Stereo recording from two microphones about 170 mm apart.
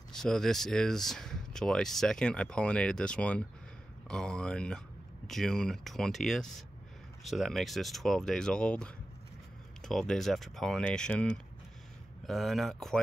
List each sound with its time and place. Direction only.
0.1 s speech: centre (ahead or behind)